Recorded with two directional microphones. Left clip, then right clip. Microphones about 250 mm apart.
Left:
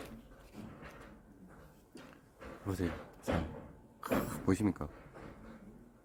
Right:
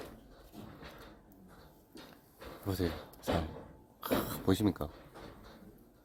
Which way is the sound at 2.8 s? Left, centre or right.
Right.